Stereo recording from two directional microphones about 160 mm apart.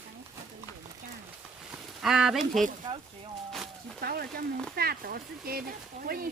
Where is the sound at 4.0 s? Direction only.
70° right (ahead or behind).